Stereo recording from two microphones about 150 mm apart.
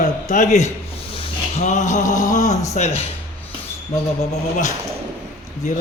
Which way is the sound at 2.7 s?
45° left (ahead or behind).